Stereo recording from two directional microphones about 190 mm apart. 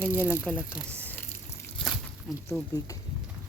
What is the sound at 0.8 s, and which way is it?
Speech, 5° right (ahead or behind).